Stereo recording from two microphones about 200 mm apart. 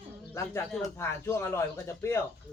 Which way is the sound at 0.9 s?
15° left (ahead or behind).